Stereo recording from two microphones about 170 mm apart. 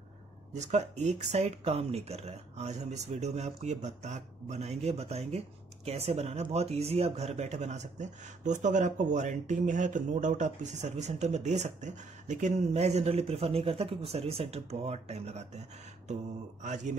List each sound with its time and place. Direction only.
0.5 s speech: 40° right (ahead or behind)
16.6 s a man's voice: 45° right (ahead or behind)